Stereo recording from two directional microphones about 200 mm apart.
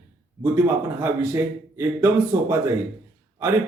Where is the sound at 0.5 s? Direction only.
15° right (ahead or behind).